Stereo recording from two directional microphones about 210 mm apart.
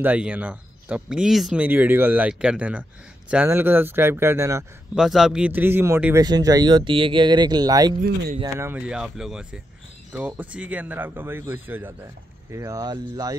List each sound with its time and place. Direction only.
0.0 s speech: 5° right (ahead or behind)
4.9 s speech: centre (ahead or behind); by 7.9 s 20° right (ahead or behind)
8.0 s speech: 45° right (ahead or behind)
8.5 s speech: 10° right (ahead or behind)